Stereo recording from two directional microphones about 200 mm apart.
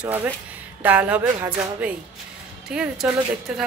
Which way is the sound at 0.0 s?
10° right (ahead or behind).